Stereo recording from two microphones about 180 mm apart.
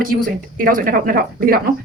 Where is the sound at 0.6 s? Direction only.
50° right (ahead or behind).